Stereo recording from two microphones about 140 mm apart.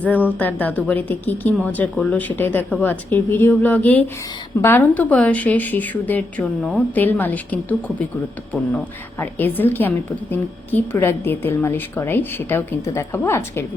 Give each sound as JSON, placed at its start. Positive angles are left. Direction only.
{"t": 0.0, "sound": "a woman's voice", "side_deg": 10}
{"t": 6.9, "sound": "a woman's voice", "side_deg": 15}